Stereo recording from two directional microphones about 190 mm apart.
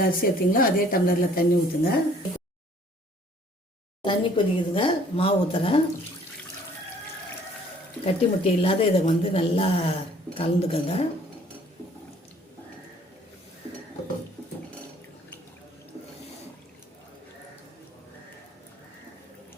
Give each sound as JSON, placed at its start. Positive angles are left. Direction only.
{"t": 0.0, "sound": "a woman's voice", "side_deg": 50}
{"t": 4.0, "sound": "a woman's voice", "side_deg": 25}
{"t": 8.0, "sound": "a woman's voice", "side_deg": 30}